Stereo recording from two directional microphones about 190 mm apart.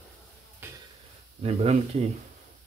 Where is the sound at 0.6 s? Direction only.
10° right (ahead or behind).